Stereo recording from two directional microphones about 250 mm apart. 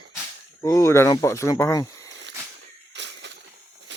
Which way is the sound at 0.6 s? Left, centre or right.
Centre.